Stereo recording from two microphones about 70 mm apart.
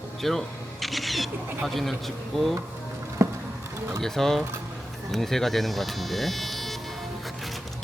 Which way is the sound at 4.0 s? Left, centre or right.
Centre.